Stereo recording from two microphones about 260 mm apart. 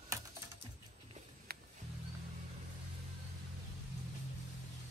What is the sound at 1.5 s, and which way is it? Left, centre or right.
Music, right.